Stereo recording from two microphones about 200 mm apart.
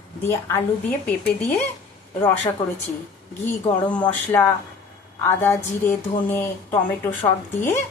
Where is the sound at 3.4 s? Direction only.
5° left (ahead or behind).